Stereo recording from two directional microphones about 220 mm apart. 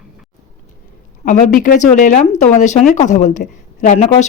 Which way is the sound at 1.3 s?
35° left (ahead or behind).